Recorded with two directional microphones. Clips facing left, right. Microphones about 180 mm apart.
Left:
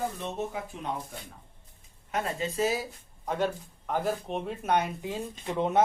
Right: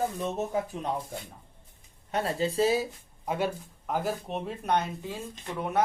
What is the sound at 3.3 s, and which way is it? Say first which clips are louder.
Speech: even; 10° right (ahead or behind).